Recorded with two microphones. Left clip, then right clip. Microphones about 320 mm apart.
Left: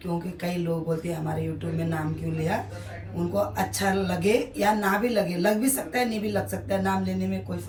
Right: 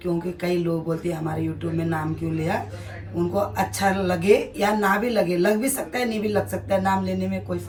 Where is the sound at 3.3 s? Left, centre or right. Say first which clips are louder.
Right 1 dB; centre.